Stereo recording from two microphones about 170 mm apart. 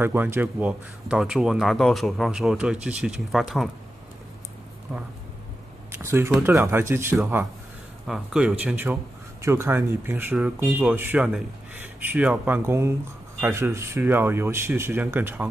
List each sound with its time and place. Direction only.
0.0 s speech: 15° right (ahead or behind)
6.0 s speech: 15° right (ahead or behind)